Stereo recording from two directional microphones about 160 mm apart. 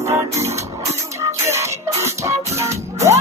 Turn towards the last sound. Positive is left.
turn(degrees=-20)  # may be behind; listen again after turning